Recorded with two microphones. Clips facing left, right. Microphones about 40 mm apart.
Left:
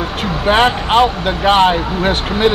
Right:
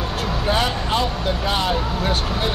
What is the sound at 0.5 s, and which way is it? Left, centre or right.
Speech, left.